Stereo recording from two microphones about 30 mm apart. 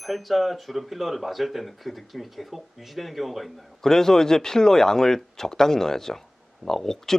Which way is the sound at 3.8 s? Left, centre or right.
Centre.